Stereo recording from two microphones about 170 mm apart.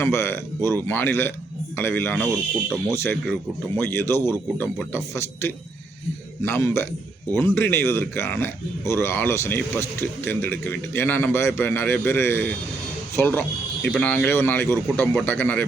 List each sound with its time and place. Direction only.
0.0 s a man's voice: 15° left (ahead or behind)
2.1 s speech: 5° right (ahead or behind)
2.8 s a man's voice: 15° left (ahead or behind)